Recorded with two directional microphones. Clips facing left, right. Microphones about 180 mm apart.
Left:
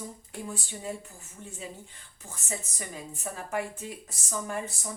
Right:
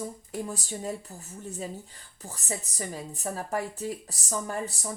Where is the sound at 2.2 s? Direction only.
35° right (ahead or behind).